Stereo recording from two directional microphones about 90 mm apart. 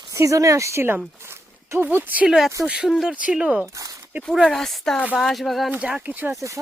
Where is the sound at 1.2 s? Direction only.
30° right (ahead or behind).